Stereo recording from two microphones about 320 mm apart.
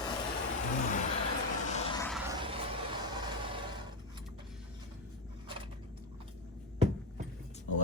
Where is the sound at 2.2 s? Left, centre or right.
Centre.